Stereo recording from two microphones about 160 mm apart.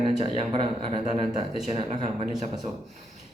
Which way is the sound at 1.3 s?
30° right (ahead or behind).